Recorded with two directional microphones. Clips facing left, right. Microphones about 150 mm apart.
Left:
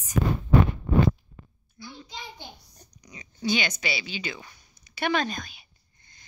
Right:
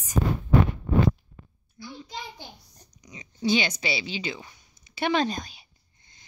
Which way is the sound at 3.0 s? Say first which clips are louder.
Right 3 dB; 20° right (ahead or behind).